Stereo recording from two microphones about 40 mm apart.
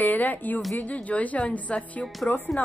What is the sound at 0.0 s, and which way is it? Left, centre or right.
Speech, left.